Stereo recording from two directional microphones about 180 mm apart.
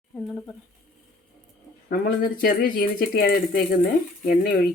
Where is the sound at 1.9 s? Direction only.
55° left (ahead or behind).